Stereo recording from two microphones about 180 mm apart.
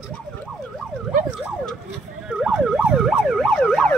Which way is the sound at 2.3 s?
5° right (ahead or behind).